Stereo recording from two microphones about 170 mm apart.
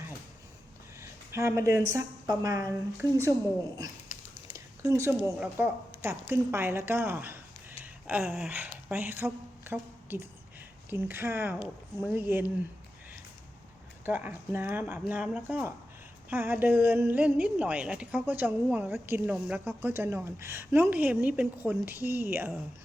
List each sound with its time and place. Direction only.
1.3 s a woman's voice: 15° right (ahead or behind)
4.5 s a woman's voice: 20° right (ahead or behind)
14.0 s a woman's voice: 10° right (ahead or behind)
19.5 s a woman's voice: 15° right (ahead or behind)